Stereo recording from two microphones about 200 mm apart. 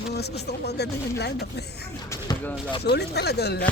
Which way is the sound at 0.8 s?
55° left (ahead or behind).